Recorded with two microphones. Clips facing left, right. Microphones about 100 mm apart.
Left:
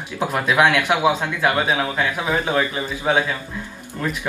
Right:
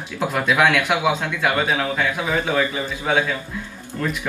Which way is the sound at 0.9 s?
20° left (ahead or behind).